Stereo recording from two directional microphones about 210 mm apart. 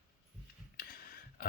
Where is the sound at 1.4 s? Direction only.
45° left (ahead or behind).